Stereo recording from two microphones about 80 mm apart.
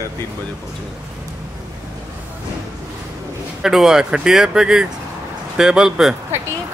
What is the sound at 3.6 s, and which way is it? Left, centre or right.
Speech, centre.